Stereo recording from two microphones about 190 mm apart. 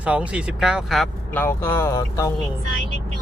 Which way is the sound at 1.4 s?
10° left (ahead or behind).